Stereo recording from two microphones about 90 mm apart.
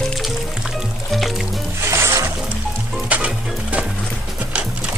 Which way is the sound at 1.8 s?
30° right (ahead or behind).